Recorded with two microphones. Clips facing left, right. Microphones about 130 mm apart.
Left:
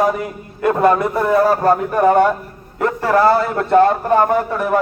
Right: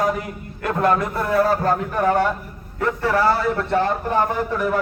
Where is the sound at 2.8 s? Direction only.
45° left (ahead or behind).